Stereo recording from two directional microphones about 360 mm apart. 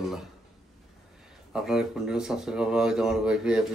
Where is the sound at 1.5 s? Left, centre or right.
Centre.